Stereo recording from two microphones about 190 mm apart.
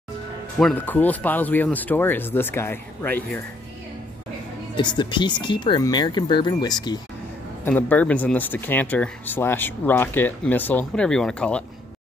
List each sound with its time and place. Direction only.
0.6 s speech: 5° left (ahead or behind)
4.7 s speech: 25° left (ahead or behind)
7.6 s speech: 10° left (ahead or behind)